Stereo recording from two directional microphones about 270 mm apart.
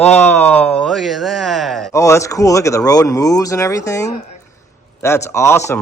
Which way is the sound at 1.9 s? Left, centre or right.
Centre.